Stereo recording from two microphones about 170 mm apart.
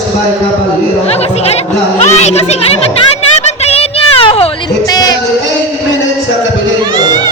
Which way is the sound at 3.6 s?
35° left (ahead or behind).